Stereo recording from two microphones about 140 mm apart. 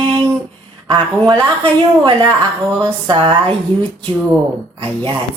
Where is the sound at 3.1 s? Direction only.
35° right (ahead or behind).